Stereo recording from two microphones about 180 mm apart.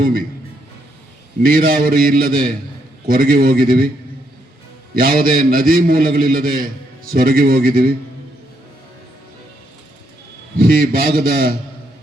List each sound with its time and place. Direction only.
1.4 s a man's voice: 55° right (ahead or behind)
4.9 s a man's voice: 55° right (ahead or behind)
10.6 s a man's voice: 55° right (ahead or behind)